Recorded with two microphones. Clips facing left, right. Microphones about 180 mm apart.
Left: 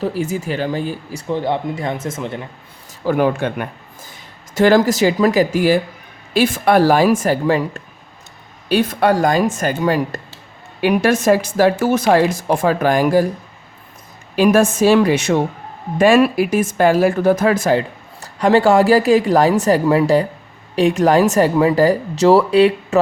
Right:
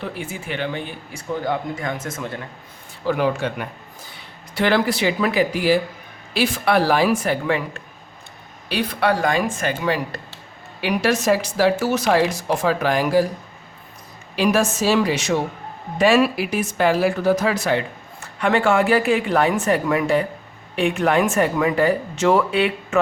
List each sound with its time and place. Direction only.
0.0 s speech: 40° left (ahead or behind); by 2.5 s 25° left (ahead or behind)
3.1 s speech: 50° left (ahead or behind)
14.3 s speech: 50° left (ahead or behind)